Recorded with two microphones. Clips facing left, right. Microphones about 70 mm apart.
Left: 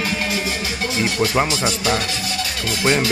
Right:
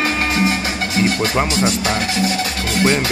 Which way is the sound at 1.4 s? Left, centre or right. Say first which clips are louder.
Right 2 dB; right.